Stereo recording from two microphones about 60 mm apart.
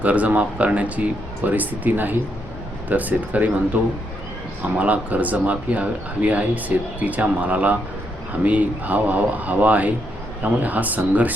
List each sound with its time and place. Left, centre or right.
0.0 s speech: right